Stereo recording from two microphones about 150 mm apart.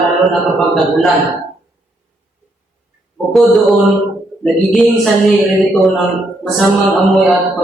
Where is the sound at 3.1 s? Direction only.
Centre (ahead or behind).